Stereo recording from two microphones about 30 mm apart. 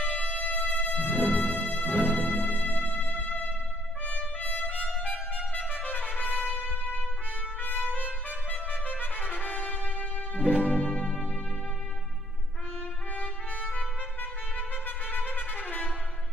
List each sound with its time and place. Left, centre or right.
0.0 s music: left
1.3 s music: left
1.9 s music: right
2.1 s music: left
4.0 s trumpet: left
4.7 s music: left
5.7 s trumpet: left
6.7 s trumpet: left
7.6 s trumpet: left
10.6 s music: left
13.1 s trumpet: left
15.0 s trumpet: left